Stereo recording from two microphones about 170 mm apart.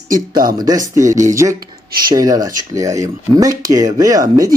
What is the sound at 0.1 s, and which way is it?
Speech, 55° right (ahead or behind).